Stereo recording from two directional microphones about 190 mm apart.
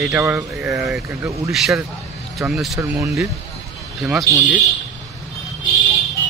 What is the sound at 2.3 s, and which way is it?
Speech, centre (ahead or behind).